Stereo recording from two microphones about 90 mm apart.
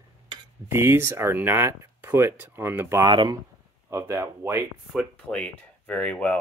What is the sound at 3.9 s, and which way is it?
Speech, 30° right (ahead or behind).